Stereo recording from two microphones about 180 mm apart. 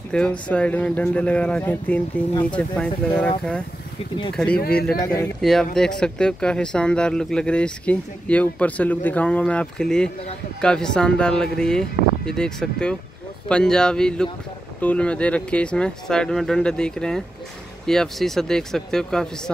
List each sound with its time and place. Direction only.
0.1 s speech: 5° left (ahead or behind)
4.6 s speech: 55° left (ahead or behind)
5.0 s speech: 15° left (ahead or behind)
5.4 s speech: centre (ahead or behind)